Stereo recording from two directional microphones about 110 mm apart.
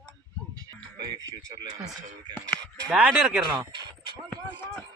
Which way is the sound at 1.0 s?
35° right (ahead or behind).